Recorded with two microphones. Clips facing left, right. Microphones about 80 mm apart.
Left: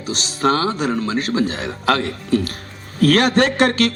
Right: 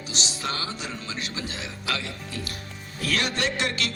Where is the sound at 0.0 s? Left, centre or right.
Left.